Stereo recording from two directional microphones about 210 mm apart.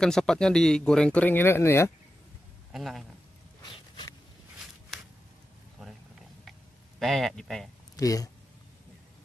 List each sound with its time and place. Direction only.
0.0 s speech: 5° left (ahead or behind)
2.7 s speech: centre (ahead or behind)
3.6 s a sound: 20° left (ahead or behind)
4.9 s a sound: centre (ahead or behind)
7.0 s speech: centre (ahead or behind)
7.9 s speech: 15° left (ahead or behind)